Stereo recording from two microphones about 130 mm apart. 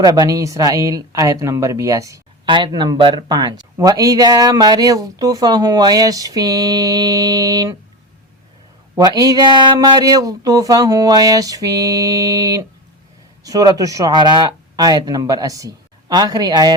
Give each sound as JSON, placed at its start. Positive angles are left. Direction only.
{"t": 0.0, "sound": "speech", "side_deg": -30}
{"t": 9.0, "sound": "speech", "side_deg": -30}